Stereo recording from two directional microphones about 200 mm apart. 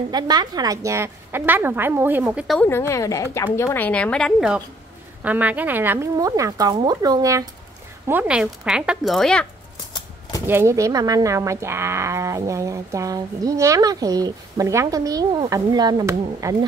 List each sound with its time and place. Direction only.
0.1 s speech: 20° right (ahead or behind)
2.4 s speech: centre (ahead or behind)
2.7 s a woman's voice: 15° left (ahead or behind)
10.4 s speech: 10° right (ahead or behind)